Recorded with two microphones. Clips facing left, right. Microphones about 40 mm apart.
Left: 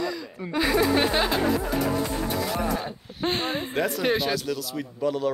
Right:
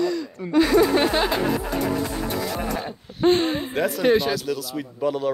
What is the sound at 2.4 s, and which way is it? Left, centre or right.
Speech, centre.